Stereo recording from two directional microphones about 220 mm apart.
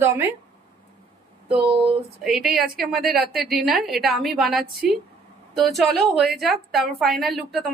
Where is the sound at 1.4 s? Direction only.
25° right (ahead or behind).